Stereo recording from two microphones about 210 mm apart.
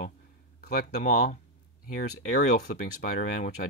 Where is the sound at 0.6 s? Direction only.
35° left (ahead or behind).